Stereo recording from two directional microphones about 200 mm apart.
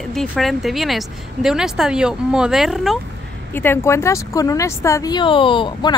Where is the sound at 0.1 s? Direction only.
Centre (ahead or behind).